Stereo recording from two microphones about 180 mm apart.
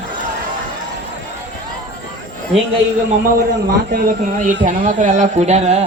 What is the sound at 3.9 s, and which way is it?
Speech, 50° right (ahead or behind).